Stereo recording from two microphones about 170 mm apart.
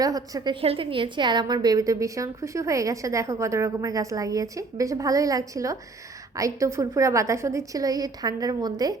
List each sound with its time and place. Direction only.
0.0 s a woman's voice: 20° right (ahead or behind)
0.6 s a woman's voice: 35° right (ahead or behind)